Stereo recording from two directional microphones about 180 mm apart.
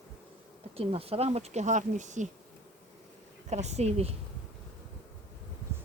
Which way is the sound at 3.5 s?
40° right (ahead or behind).